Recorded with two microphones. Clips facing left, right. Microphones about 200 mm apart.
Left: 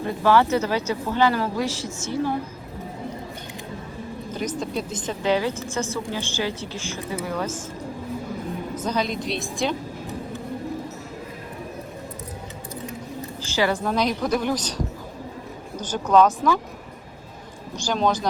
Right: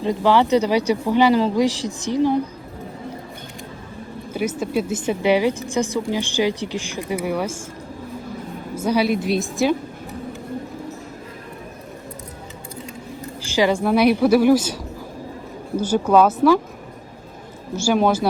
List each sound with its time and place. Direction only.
0.0 s a woman's voice: 15° right (ahead or behind)
4.4 s a woman's voice: 5° right (ahead or behind)
8.8 s a woman's voice: 10° right (ahead or behind)
13.4 s a woman's voice: 15° right (ahead or behind)
15.8 s a woman's voice: 10° right (ahead or behind)
17.8 s a woman's voice: 10° right (ahead or behind)